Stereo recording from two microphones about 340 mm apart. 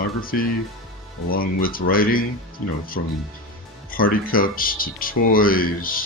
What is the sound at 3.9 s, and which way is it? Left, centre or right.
Speech, left.